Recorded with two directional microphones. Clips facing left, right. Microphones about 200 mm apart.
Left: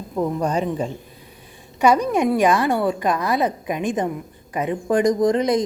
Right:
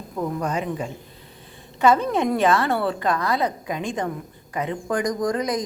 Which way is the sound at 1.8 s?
15° left (ahead or behind).